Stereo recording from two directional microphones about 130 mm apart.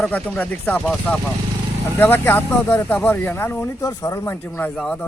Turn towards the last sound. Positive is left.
turn(degrees=10)  # may be behind; listen again after turning